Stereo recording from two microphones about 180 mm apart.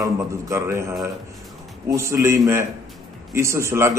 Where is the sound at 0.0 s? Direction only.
15° right (ahead or behind).